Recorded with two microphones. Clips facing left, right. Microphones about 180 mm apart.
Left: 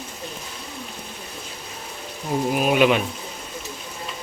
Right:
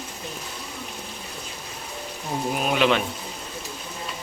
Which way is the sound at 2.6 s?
10° left (ahead or behind).